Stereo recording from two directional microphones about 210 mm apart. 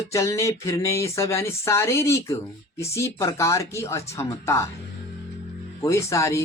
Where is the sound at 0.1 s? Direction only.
15° left (ahead or behind).